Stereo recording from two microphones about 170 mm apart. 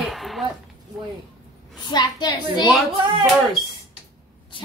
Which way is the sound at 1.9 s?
25° left (ahead or behind).